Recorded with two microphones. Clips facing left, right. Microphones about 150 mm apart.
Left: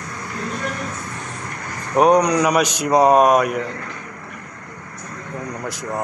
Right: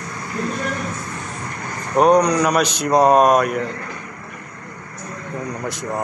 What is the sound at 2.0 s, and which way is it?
Speech, 15° left (ahead or behind).